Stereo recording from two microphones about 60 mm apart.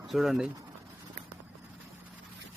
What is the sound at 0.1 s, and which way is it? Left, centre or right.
Speech, centre.